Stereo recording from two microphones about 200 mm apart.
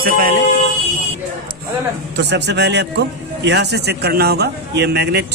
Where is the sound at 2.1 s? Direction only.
60° right (ahead or behind).